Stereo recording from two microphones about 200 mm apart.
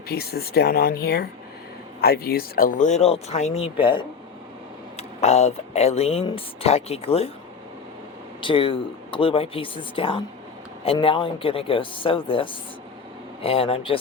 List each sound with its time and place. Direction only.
0.1 s speech: 50° left (ahead or behind); by 7.3 s 30° left (ahead or behind)
8.4 s speech: 25° left (ahead or behind)